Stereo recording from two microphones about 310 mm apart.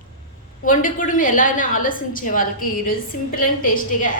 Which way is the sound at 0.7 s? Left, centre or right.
Left.